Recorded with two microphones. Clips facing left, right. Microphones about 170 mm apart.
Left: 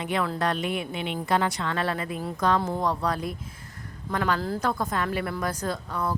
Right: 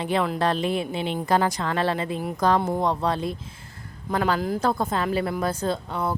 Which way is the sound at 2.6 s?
20° right (ahead or behind).